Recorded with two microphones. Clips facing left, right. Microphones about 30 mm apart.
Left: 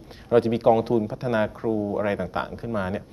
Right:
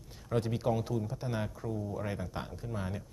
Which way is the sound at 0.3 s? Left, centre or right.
Left.